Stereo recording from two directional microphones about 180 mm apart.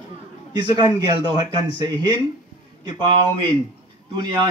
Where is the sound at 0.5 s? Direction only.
25° right (ahead or behind).